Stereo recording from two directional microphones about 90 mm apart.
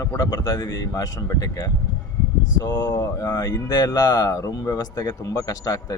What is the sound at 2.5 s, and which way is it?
Speech, 50° left (ahead or behind).